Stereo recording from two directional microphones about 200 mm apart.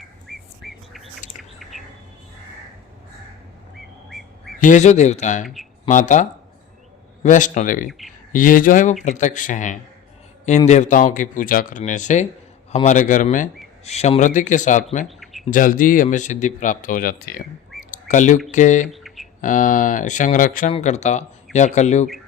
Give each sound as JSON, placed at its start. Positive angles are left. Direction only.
{"t": 0.0, "sound": "bird", "side_deg": 0}
{"t": 4.6, "sound": "speech", "side_deg": 35}
{"t": 7.9, "sound": "speech", "side_deg": 0}
{"t": 8.3, "sound": "speech", "side_deg": 40}
{"t": 15.0, "sound": "a sound", "side_deg": 0}
{"t": 15.4, "sound": "speech", "side_deg": 40}
{"t": 17.9, "sound": "bird", "side_deg": 40}
{"t": 18.5, "sound": "speech", "side_deg": 40}
{"t": 18.9, "sound": "a sound", "side_deg": 0}
{"t": 19.4, "sound": "speech", "side_deg": 40}